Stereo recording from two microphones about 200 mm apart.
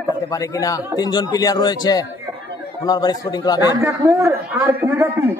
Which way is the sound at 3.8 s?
15° right (ahead or behind).